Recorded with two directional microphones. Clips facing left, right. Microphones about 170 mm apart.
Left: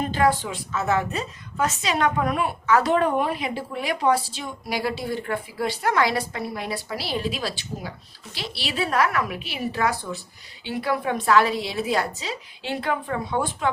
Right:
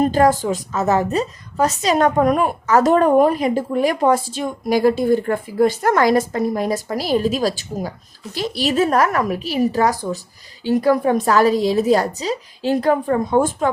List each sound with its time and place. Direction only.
0.0 s a woman's voice: 40° right (ahead or behind)